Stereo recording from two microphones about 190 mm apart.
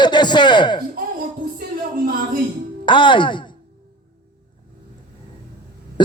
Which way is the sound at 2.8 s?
25° left (ahead or behind).